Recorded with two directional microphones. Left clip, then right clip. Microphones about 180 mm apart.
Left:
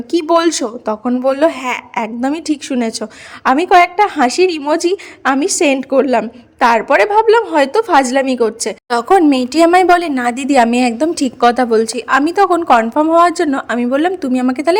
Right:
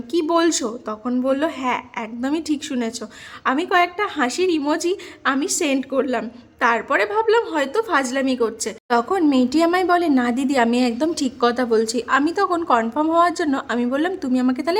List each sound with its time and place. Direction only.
0.1 s a woman's voice: 25° left (ahead or behind)